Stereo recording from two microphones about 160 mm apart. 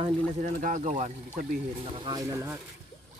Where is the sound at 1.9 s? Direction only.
30° right (ahead or behind).